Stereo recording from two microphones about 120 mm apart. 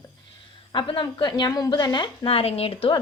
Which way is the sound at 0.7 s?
40° left (ahead or behind).